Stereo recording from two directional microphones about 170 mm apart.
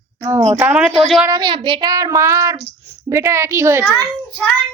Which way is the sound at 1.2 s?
25° right (ahead or behind).